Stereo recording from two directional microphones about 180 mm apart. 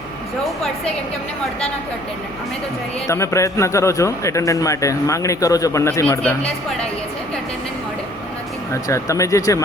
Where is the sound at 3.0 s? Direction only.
15° left (ahead or behind).